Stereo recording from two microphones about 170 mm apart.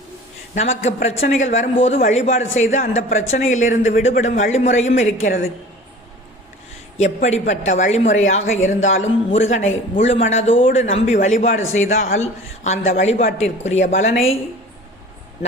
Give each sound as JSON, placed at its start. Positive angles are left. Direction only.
{"t": 0.5, "sound": "a man's voice", "side_deg": 45}
{"t": 7.0, "sound": "a man's voice", "side_deg": 45}